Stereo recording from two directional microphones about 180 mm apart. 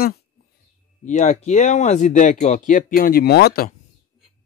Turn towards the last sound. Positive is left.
turn(degrees=60)  # may be behind; listen again after turning